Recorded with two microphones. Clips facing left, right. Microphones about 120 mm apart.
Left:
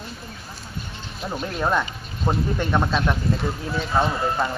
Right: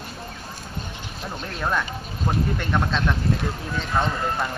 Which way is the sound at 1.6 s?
15° left (ahead or behind).